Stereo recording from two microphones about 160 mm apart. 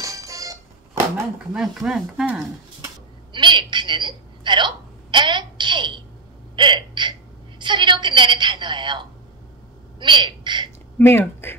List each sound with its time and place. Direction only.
0.0 s music: 20° right (ahead or behind)
1.5 s speech: 5° right (ahead or behind)
3.3 s a woman's voice: 30° right (ahead or behind)
4.5 s a sound: 30° right (ahead or behind)
6.5 s hiccup: 30° right (ahead or behind)
9.9 s a woman's voice: 30° right (ahead or behind)
11.0 s speech: 15° left (ahead or behind)